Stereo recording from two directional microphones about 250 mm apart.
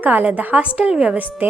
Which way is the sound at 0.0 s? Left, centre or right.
Centre.